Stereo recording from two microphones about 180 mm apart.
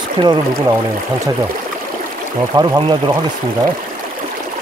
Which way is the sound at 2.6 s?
25° right (ahead or behind).